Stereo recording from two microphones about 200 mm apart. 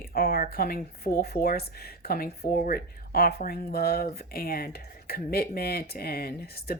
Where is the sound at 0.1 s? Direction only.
50° left (ahead or behind).